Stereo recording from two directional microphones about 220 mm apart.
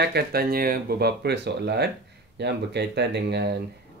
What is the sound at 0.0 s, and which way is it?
Speech, 45° right (ahead or behind).